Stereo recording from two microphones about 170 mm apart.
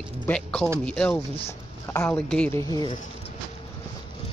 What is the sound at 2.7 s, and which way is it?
Speech, 25° left (ahead or behind).